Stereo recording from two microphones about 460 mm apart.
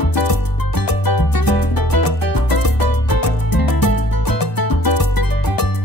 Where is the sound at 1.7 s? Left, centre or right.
Left.